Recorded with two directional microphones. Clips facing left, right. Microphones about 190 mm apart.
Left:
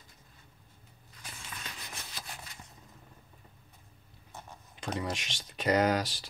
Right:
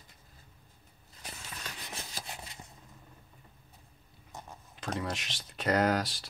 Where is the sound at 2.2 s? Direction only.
25° right (ahead or behind).